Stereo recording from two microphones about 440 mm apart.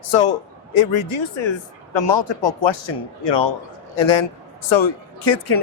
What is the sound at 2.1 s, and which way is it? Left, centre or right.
Speech, left.